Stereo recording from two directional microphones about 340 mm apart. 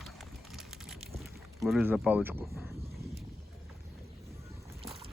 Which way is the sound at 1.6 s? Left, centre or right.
Centre.